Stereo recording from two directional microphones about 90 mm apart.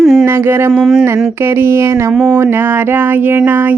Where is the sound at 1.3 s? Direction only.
30° right (ahead or behind).